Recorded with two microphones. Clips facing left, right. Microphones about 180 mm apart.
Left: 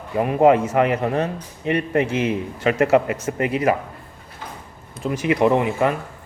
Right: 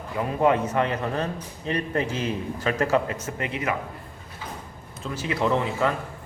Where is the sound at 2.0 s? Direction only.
90° left.